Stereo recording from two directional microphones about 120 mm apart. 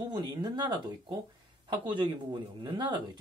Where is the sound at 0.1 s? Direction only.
40° right (ahead or behind).